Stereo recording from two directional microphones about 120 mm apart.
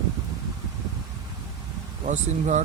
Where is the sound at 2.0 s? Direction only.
75° right (ahead or behind).